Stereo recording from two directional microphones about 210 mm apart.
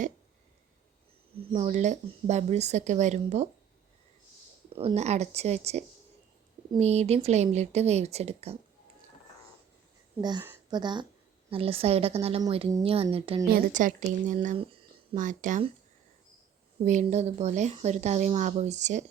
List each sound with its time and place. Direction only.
1.4 s speech: 35° right (ahead or behind)
4.7 s speech: 25° right (ahead or behind)
10.2 s speech: 20° right (ahead or behind)
13.5 s speech: 40° right (ahead or behind)
16.8 s speech: 35° right (ahead or behind)